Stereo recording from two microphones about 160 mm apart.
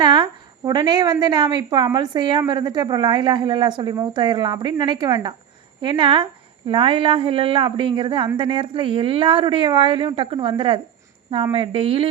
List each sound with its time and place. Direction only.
0.0 s a woman's voice: 30° right (ahead or behind)